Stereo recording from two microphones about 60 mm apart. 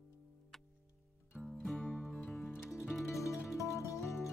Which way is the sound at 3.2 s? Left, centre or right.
Left.